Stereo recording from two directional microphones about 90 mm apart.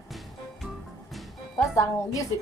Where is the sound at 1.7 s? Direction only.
35° left (ahead or behind).